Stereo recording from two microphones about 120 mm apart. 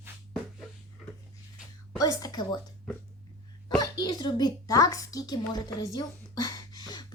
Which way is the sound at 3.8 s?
35° left (ahead or behind).